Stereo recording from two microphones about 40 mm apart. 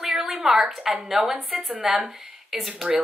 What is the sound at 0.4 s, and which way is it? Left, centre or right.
A woman's voice, centre.